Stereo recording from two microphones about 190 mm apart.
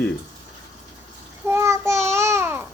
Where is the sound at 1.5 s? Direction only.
15° right (ahead or behind).